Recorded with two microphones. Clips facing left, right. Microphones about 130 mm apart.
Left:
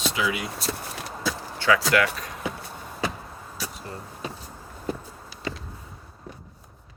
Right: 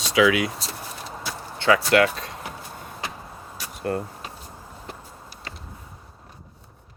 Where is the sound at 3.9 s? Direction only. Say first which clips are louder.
Right 12 dB; 65° right (ahead or behind).